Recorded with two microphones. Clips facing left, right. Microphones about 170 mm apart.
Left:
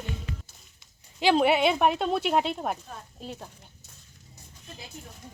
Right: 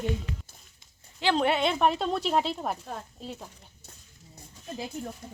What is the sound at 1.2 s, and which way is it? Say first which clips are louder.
Speech: left 3 dB; 10° left (ahead or behind).